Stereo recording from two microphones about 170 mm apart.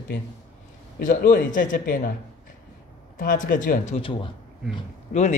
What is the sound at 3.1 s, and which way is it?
Speech, 55° left (ahead or behind).